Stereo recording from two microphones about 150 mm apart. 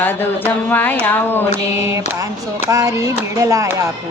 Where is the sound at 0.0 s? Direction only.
10° left (ahead or behind).